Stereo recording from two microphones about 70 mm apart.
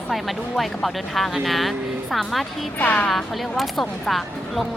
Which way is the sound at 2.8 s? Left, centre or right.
Centre.